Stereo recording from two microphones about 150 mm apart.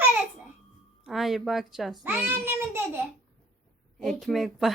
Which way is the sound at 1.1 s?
Centre (ahead or behind).